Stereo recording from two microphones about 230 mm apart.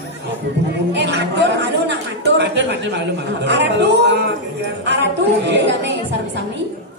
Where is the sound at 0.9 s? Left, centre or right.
Right.